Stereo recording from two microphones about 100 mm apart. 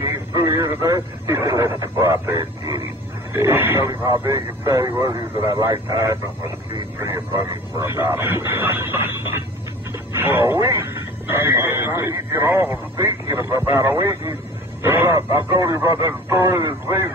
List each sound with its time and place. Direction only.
0.1 s speech: 30° right (ahead or behind)
3.3 s speech: 25° right (ahead or behind)